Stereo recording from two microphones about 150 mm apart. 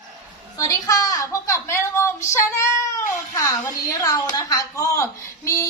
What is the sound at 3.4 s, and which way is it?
A woman's voice, 25° left (ahead or behind).